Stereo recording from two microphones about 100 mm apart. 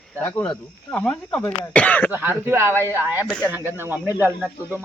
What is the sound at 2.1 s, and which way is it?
Speech, 20° right (ahead or behind).